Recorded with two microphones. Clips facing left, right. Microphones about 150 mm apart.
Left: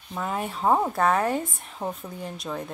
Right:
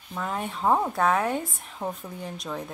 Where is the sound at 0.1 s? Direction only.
5° left (ahead or behind).